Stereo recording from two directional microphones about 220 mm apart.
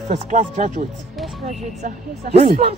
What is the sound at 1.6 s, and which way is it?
Speech, 30° right (ahead or behind).